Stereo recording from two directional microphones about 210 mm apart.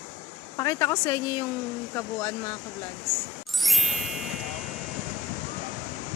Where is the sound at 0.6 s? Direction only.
15° left (ahead or behind).